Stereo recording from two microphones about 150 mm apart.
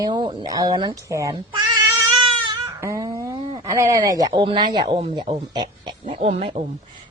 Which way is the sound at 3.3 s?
40° right (ahead or behind).